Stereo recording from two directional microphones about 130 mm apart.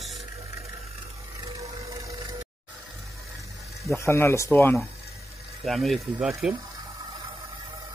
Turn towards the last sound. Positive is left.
turn(degrees=-5)  # may be behind; listen again after turning